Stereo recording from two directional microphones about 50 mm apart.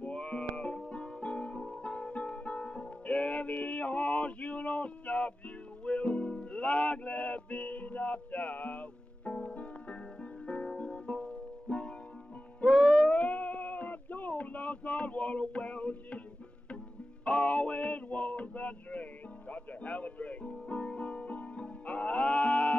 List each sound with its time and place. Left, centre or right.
0.0 s music: left
13.1 s a sound: left
17.2 s music: left